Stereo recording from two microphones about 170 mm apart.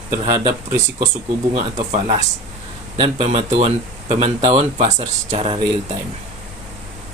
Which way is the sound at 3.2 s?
40° right (ahead or behind).